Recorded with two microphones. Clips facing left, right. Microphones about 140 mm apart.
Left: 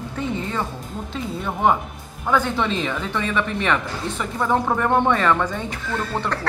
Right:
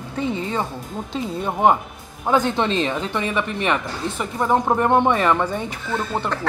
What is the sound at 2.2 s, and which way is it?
Speech, 20° right (ahead or behind).